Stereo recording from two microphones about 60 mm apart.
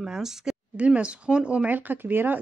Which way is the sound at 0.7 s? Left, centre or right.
Right.